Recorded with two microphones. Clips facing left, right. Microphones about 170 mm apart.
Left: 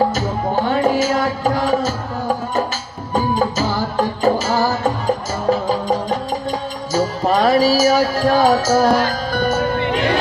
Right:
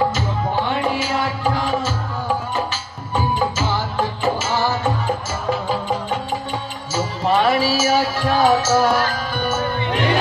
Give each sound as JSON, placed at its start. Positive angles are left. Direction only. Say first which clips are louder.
{"t": 0.1, "sound": "music", "louder": "left 3 dB", "side_deg": 40}
{"t": 3.1, "sound": "music", "louder": "left 3 dB", "side_deg": 40}